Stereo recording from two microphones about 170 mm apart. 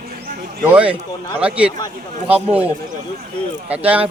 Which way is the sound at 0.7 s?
10° right (ahead or behind).